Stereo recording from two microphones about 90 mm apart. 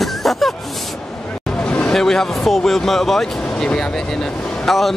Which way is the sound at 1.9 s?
5° left (ahead or behind).